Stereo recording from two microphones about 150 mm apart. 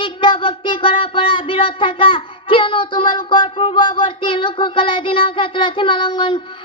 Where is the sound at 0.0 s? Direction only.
35° left (ahead or behind).